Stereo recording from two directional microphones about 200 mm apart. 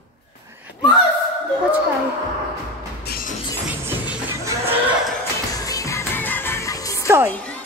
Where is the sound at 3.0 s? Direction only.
50° left (ahead or behind).